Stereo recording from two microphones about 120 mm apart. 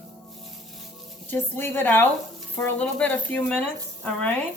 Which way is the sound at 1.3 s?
20° left (ahead or behind).